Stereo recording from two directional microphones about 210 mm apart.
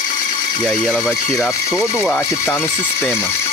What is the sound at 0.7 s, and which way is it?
Speech, 5° right (ahead or behind).